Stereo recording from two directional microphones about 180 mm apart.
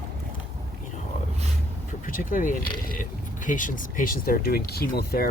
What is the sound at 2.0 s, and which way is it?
Speech, 45° left (ahead or behind).